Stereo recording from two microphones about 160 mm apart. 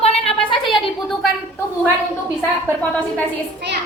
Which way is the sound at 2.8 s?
10° left (ahead or behind).